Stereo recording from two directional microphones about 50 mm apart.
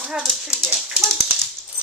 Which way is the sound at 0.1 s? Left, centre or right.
Centre.